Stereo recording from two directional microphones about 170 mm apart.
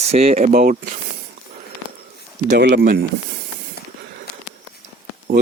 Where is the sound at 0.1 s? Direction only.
35° right (ahead or behind).